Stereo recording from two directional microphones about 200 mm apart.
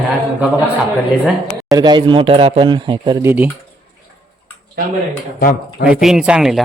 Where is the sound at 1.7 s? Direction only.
20° right (ahead or behind).